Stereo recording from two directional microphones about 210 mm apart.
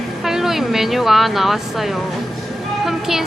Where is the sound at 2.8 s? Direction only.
Centre (ahead or behind).